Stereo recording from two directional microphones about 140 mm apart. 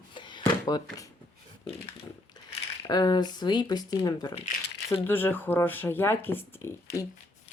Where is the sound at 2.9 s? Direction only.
30° left (ahead or behind).